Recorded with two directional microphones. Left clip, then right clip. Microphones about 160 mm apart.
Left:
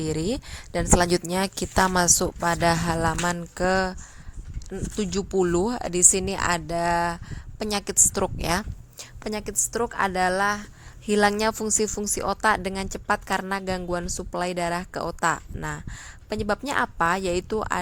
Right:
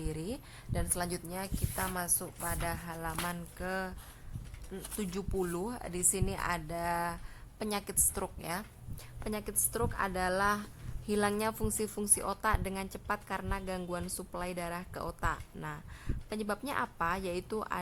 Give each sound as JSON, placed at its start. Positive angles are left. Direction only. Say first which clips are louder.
{"t": 0.0, "sound": "a woman's voice", "louder": "left 13 dB", "side_deg": 45}
{"t": 4.7, "sound": "a woman's voice", "louder": "left 11 dB", "side_deg": 40}